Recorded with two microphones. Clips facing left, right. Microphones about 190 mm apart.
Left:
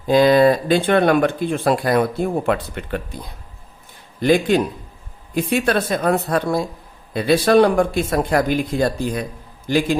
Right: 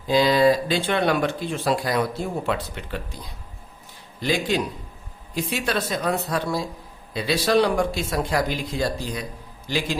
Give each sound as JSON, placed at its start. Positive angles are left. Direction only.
{"t": 0.1, "sound": "speech", "side_deg": 55}
{"t": 4.2, "sound": "speech", "side_deg": 55}